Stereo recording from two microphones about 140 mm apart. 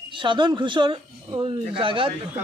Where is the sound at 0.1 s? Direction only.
35° right (ahead or behind).